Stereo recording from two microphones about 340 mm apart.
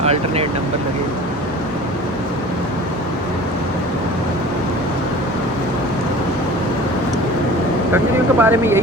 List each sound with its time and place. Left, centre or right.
0.0 s speech: centre
7.9 s speech: centre